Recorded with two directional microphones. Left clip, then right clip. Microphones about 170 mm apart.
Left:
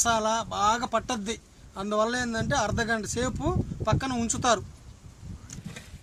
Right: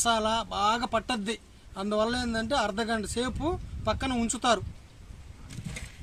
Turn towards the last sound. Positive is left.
turn(degrees=0)  # may be behind; listen again after turning